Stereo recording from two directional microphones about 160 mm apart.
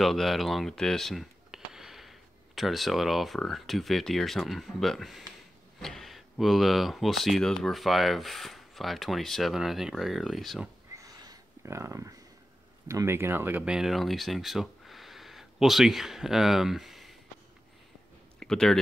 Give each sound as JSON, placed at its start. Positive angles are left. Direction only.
{"t": 0.0, "sound": "speech", "side_deg": 0}
{"t": 11.0, "sound": "a sound", "side_deg": -25}
{"t": 12.8, "sound": "speech", "side_deg": -15}
{"t": 18.4, "sound": "speech", "side_deg": 5}